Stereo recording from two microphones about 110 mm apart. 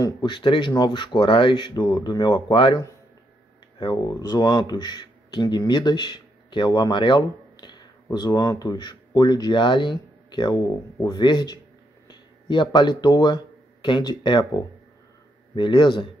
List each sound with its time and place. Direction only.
0.0 s speech: 45° left (ahead or behind)
3.8 s speech: 35° left (ahead or behind)
15.5 s speech: 45° left (ahead or behind)